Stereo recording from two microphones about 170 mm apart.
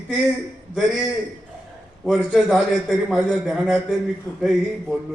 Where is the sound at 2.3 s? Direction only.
5° right (ahead or behind).